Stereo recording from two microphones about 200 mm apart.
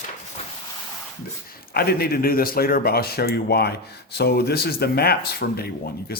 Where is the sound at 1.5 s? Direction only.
50° left (ahead or behind).